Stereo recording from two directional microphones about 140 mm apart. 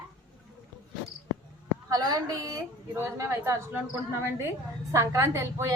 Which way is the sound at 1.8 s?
25° right (ahead or behind).